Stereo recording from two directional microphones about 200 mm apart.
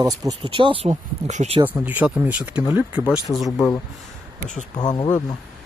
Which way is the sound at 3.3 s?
5° left (ahead or behind).